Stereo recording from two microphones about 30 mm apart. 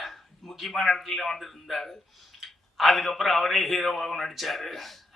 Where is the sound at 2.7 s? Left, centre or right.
Centre.